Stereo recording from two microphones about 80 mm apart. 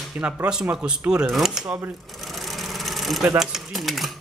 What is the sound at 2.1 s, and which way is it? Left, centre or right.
Sewing machine, centre.